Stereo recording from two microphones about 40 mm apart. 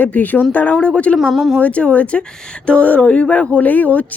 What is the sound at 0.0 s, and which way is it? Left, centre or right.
Speech, left.